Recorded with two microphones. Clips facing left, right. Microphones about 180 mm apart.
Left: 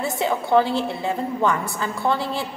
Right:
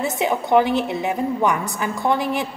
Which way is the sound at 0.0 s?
20° right (ahead or behind).